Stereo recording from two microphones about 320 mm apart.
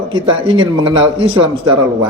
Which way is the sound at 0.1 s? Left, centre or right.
Centre.